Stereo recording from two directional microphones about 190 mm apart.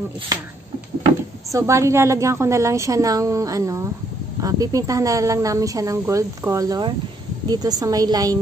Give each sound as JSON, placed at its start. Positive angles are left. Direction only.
{"t": 1.5, "sound": "a woman's voice", "side_deg": -15}